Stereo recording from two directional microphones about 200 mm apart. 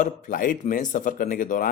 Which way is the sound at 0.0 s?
40° left (ahead or behind).